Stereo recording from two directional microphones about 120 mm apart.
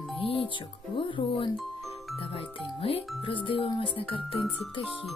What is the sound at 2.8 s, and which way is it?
Speech, 50° left (ahead or behind).